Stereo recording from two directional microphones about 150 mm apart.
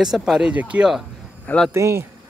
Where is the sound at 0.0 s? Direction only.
5° right (ahead or behind).